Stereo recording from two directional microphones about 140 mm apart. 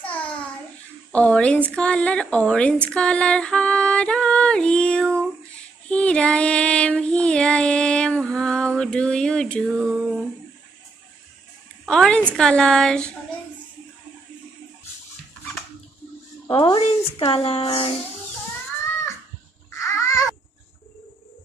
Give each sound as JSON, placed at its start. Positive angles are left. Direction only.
{"t": 0.1, "sound": "a sound", "side_deg": 10}
{"t": 1.1, "sound": "speech", "side_deg": 10}
{"t": 2.9, "sound": "music", "side_deg": 5}
{"t": 5.9, "sound": "child singing", "side_deg": 10}
{"t": 9.9, "sound": "a sound", "side_deg": -5}
{"t": 11.8, "sound": "music", "side_deg": 5}
{"t": 16.4, "sound": "speech", "side_deg": 35}
{"t": 19.7, "sound": "babbling", "side_deg": 20}